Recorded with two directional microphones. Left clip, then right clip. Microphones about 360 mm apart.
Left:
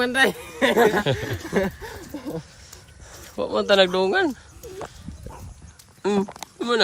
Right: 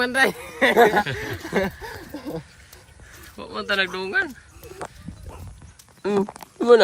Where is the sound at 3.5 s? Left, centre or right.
Centre.